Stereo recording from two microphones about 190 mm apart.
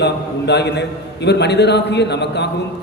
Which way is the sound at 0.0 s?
60° left (ahead or behind).